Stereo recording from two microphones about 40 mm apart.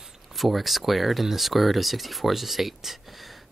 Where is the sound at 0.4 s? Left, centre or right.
Centre.